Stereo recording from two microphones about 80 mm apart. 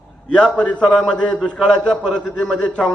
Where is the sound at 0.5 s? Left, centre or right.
Centre.